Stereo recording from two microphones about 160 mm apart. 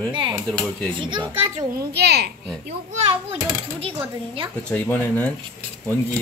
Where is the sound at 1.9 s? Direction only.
90° right.